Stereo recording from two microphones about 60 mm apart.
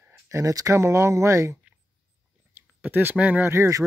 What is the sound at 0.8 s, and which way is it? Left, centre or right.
Speech, right.